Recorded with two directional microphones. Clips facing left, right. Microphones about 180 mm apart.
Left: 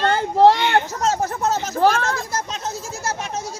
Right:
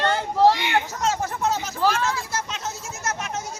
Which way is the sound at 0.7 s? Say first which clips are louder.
Left 4 dB; 40° left (ahead or behind).